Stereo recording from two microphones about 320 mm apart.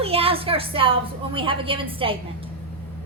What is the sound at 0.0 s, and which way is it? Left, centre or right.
A woman's voice, centre.